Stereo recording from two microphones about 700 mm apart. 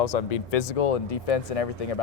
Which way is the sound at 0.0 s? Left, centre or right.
Left.